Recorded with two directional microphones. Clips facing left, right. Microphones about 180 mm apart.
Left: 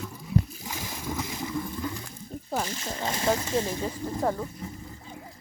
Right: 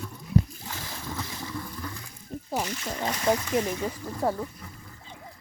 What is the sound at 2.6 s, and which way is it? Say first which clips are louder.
Speech: right 1 dB; 25° left (ahead or behind).